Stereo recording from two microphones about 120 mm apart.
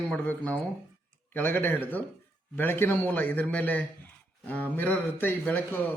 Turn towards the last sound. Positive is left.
turn(degrees=15)  # may be behind; listen again after turning